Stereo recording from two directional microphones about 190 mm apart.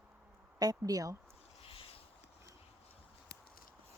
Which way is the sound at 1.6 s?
30° left (ahead or behind).